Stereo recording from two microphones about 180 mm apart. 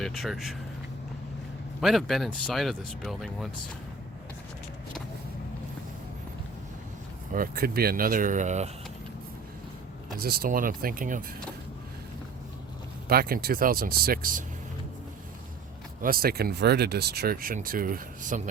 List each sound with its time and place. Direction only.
0.0 s speech: centre (ahead or behind)
1.8 s speech: centre (ahead or behind)
7.3 s speech: 55° right (ahead or behind)
10.2 s speech: 55° right (ahead or behind)
13.1 s speech: 55° right (ahead or behind)
16.0 s speech: 55° right (ahead or behind)